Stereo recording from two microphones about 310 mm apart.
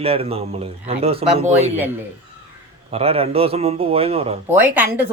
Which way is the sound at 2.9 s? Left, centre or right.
Centre.